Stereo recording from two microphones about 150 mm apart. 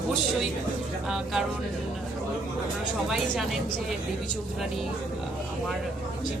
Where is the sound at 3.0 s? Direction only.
5° right (ahead or behind).